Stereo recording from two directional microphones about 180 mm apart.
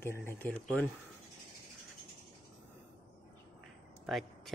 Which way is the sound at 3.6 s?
Centre (ahead or behind).